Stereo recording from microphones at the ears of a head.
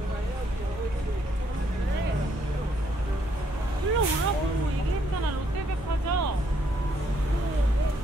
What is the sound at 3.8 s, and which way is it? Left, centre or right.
Vehicle, right.